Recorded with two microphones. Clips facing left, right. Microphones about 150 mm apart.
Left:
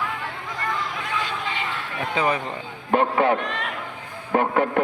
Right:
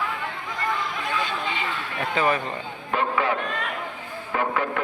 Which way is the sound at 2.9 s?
55° left (ahead or behind).